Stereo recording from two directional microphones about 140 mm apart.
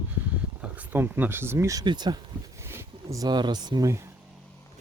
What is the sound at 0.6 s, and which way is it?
Speech, 10° right (ahead or behind).